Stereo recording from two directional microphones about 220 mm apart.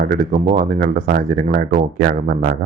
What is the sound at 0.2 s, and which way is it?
Speech, 35° right (ahead or behind).